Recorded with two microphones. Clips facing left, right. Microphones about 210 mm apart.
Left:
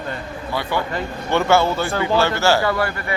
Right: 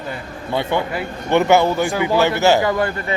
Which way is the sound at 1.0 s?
20° right (ahead or behind).